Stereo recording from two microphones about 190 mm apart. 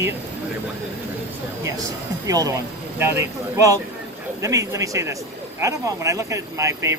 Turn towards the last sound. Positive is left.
turn(degrees=-15)  # may be behind; listen again after turning